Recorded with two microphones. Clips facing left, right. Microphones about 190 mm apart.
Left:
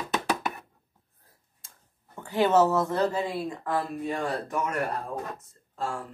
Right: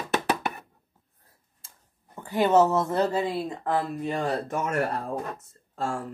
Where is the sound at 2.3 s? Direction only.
15° right (ahead or behind).